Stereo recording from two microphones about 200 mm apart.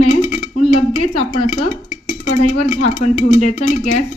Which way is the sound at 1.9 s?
35° left (ahead or behind).